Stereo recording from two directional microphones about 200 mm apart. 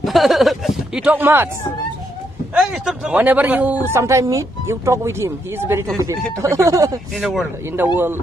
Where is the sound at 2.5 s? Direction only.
5° right (ahead or behind).